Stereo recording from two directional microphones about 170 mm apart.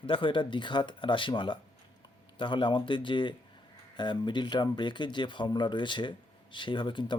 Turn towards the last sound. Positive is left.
turn(degrees=30)  # may be behind; listen again after turning